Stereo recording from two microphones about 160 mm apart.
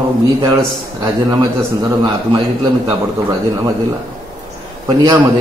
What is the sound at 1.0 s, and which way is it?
Speech, 25° right (ahead or behind).